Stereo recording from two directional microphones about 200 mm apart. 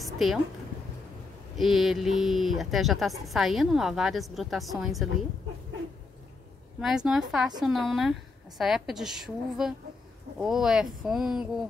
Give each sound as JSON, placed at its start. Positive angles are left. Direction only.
{"t": 0.0, "sound": "a sound", "side_deg": 0}
{"t": 1.6, "sound": "a woman's voice", "side_deg": 0}
{"t": 6.8, "sound": "a woman's voice", "side_deg": 0}